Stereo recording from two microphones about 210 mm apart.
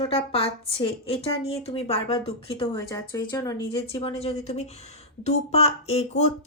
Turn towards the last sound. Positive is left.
turn(degrees=30)  # may be behind; listen again after turning